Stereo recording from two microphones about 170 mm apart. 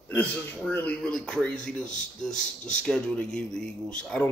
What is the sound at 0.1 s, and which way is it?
Speech, 10° left (ahead or behind).